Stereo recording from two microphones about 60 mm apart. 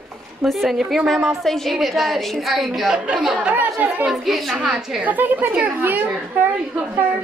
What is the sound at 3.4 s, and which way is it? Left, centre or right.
Speech, right.